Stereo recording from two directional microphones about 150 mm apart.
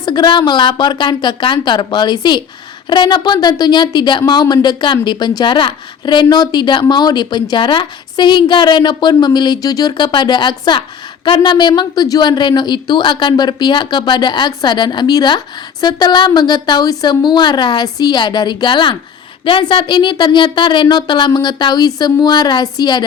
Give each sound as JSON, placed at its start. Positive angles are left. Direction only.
{"t": 0.0, "sound": "a woman's voice", "side_deg": 30}